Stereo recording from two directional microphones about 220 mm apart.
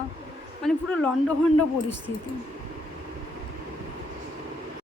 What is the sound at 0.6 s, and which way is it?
Speech, 5° left (ahead or behind).